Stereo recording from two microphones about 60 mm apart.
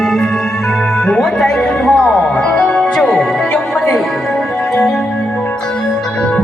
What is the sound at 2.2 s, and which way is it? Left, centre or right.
Music, left.